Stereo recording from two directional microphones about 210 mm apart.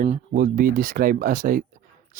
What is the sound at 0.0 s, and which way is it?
Speech, 40° right (ahead or behind).